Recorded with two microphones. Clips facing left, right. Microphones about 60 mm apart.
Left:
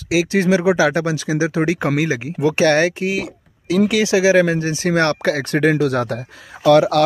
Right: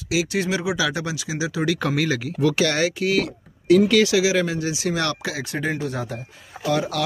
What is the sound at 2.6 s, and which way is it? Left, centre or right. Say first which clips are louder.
Speech: left 6 dB; left.